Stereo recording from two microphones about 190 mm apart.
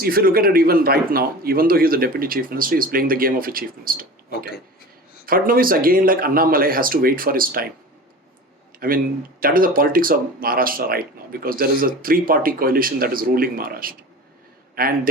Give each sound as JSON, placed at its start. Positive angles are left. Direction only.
{"t": 0.0, "sound": "speech", "side_deg": -50}
{"t": 5.2, "sound": "speech", "side_deg": -50}
{"t": 8.7, "sound": "a sound", "side_deg": -50}
{"t": 9.4, "sound": "speech", "side_deg": -50}